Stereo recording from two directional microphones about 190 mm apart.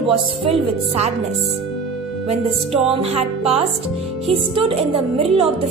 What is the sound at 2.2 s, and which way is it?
A woman's voice, 30° right (ahead or behind).